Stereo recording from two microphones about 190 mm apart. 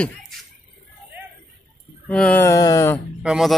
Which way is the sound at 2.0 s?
5° left (ahead or behind).